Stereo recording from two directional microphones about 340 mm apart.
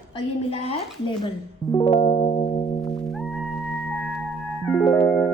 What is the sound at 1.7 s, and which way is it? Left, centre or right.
Music, centre.